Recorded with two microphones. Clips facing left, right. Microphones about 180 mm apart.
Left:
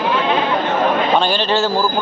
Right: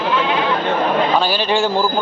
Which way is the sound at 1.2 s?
10° right (ahead or behind).